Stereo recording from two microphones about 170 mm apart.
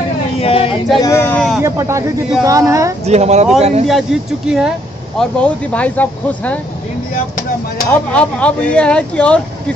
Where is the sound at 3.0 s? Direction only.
40° right (ahead or behind).